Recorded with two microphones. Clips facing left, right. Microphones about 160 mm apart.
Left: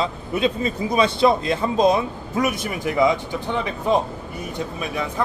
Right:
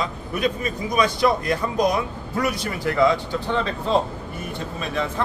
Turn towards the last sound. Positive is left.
turn(degrees=10)  # may be behind; listen again after turning